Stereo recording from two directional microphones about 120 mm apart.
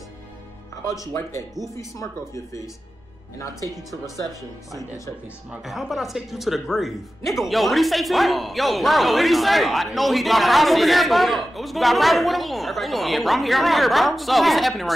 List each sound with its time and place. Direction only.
1.8 s speech: 25° left (ahead or behind)
5.7 s a man's voice: centre (ahead or behind)